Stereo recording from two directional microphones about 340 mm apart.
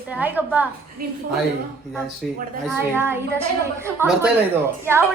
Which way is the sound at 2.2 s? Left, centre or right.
Centre.